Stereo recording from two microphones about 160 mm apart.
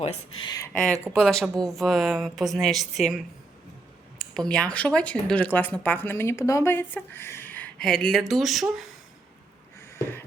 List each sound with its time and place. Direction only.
0.0 s speech: 35° left (ahead or behind)
0.7 s a woman's voice: 5° left (ahead or behind)
4.2 s speech: 5° left (ahead or behind)
9.9 s wheeze: 15° left (ahead or behind)